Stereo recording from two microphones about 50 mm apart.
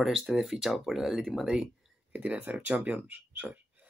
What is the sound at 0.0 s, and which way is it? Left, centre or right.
Speech, centre.